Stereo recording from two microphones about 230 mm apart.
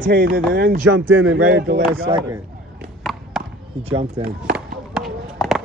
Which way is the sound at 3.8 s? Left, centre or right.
Right.